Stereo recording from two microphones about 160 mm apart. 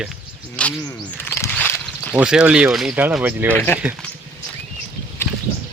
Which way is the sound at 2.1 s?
5° right (ahead or behind).